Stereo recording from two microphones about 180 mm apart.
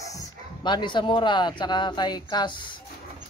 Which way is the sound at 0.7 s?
25° left (ahead or behind).